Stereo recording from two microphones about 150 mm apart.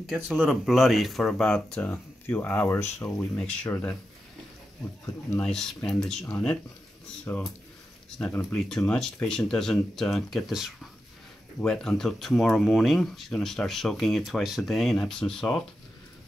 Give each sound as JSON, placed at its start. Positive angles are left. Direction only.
{"t": 0.0, "sound": "speech", "side_deg": -5}
{"t": 5.4, "sound": "speech", "side_deg": 5}
{"t": 8.2, "sound": "speech", "side_deg": 15}